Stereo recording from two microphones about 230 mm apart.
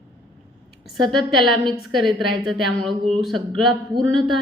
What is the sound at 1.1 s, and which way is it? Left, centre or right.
Speech, centre.